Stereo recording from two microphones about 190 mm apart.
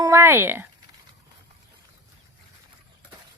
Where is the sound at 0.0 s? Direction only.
15° right (ahead or behind).